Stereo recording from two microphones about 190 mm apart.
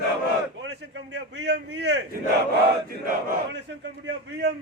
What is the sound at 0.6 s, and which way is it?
A man's voice, 65° right (ahead or behind).